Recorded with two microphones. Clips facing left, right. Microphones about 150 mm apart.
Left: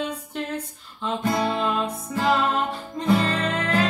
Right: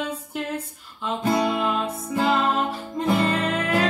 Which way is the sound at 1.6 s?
5° right (ahead or behind).